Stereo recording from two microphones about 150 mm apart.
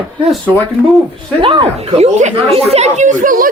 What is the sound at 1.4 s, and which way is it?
Speech, 35° right (ahead or behind).